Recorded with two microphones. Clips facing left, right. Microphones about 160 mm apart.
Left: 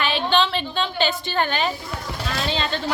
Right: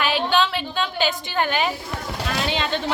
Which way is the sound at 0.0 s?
10° right (ahead or behind).